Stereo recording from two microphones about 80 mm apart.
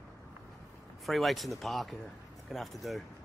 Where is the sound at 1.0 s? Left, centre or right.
Centre.